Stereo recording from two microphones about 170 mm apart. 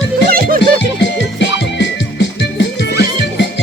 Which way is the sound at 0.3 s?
60° right (ahead or behind).